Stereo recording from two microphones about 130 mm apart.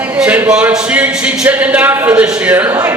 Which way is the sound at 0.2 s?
10° right (ahead or behind).